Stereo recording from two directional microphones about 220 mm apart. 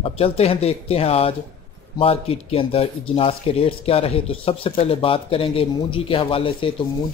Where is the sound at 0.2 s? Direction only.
25° left (ahead or behind).